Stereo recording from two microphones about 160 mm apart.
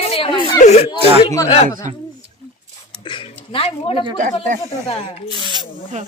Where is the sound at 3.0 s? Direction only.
30° left (ahead or behind).